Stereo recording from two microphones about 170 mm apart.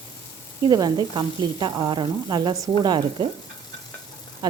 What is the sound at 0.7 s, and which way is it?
A woman's voice, 25° right (ahead or behind).